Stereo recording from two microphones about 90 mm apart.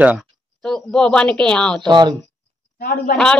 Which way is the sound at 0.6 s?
10° left (ahead or behind).